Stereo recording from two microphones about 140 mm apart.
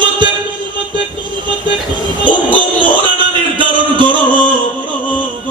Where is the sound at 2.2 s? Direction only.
35° right (ahead or behind).